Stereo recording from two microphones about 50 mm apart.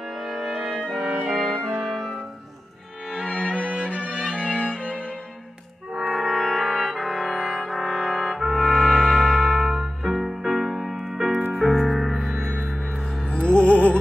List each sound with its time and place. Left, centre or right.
0.2 s music: centre
3.3 s music: left
4.3 s cello: left
5.9 s brass instrument: centre
8.5 s music: centre
13.3 s music: left